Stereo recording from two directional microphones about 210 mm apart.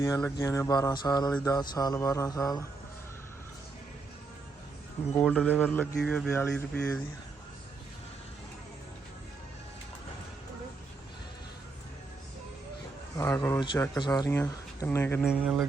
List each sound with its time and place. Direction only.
0.0 s speech: 15° left (ahead or behind)
5.1 s speech: centre (ahead or behind)
13.1 s speech: 15° left (ahead or behind)
15.3 s speech: centre (ahead or behind)